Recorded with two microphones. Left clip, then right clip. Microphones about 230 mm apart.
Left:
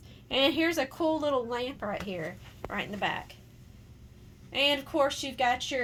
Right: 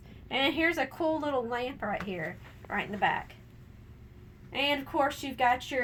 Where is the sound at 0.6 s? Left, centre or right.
Left.